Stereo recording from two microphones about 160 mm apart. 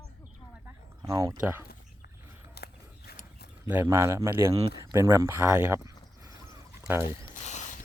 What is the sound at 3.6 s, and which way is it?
Speech, 15° right (ahead or behind).